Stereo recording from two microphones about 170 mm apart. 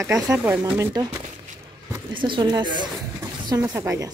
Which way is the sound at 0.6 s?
20° right (ahead or behind).